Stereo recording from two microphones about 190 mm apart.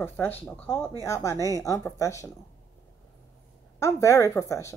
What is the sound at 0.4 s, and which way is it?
A woman's voice, 10° left (ahead or behind).